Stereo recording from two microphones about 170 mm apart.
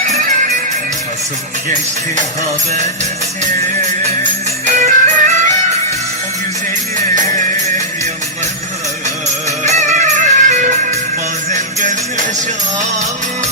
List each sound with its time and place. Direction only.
4.2 s music: 45° right (ahead or behind)
9.6 s music: 40° right (ahead or behind)